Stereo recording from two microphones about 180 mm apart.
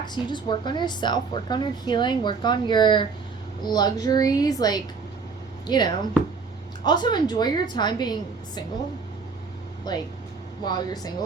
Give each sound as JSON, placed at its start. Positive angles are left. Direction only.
{"t": 0.0, "sound": "a woman's voice", "side_deg": 25}
{"t": 9.9, "sound": "a woman's voice", "side_deg": 20}